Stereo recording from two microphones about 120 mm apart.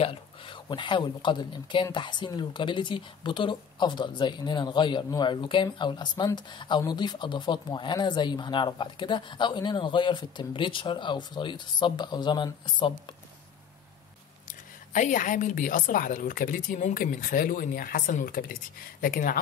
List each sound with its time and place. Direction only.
0.0 s speech: 50° left (ahead or behind)
14.9 s a woman's voice: 90° left